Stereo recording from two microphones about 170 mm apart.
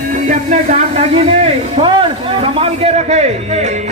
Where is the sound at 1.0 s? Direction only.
40° right (ahead or behind).